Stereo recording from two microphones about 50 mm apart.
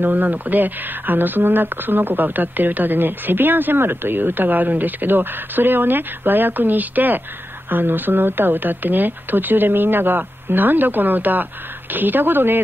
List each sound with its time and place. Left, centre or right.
0.0 s speech: right